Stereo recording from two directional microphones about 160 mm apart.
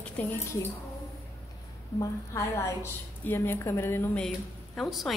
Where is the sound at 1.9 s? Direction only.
20° left (ahead or behind); by 5.1 s centre (ahead or behind).